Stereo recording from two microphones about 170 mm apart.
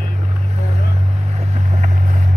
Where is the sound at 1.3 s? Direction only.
40° right (ahead or behind).